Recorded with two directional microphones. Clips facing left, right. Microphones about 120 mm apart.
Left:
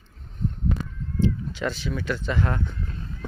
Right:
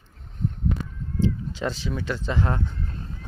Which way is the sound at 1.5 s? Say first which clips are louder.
Even; 30° right (ahead or behind).